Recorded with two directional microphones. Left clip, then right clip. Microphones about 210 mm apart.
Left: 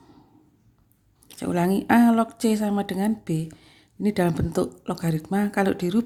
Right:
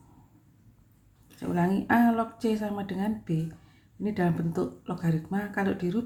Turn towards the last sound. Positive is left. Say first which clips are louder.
# left 6 dB
turn(degrees=35)  # may be behind; listen again after turning